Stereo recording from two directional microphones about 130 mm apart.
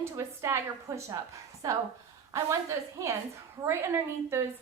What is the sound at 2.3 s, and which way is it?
A woman's voice, 20° right (ahead or behind).